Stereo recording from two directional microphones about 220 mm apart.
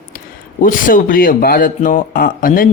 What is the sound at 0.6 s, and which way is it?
Speech, 40° left (ahead or behind).